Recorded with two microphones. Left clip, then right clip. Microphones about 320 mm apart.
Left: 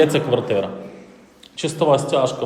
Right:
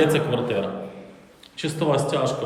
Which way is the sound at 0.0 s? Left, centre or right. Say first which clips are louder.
Left 4 dB; centre.